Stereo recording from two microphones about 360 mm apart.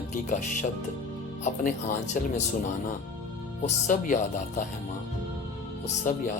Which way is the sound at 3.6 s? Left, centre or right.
Left.